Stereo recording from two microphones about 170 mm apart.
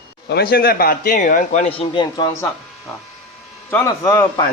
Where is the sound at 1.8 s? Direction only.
25° left (ahead or behind).